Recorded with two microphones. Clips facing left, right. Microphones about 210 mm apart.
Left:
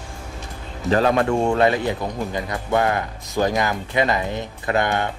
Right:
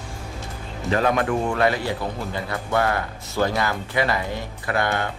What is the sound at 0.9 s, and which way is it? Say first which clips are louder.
Speech: left 3 dB; 35° left (ahead or behind).